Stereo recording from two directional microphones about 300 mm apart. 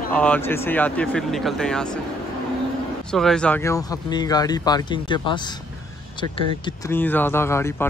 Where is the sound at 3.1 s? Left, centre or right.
Centre.